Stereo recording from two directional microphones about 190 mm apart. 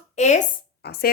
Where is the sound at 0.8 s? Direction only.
60° left (ahead or behind).